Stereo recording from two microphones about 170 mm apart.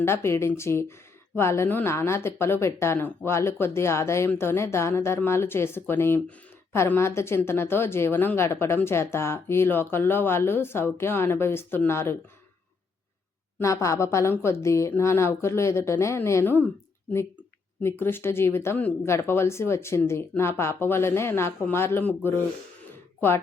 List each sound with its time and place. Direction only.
0.0 s a woman's voice: 15° left (ahead or behind)
13.6 s a woman's voice: 15° left (ahead or behind)
17.8 s a woman's voice: 15° left (ahead or behind)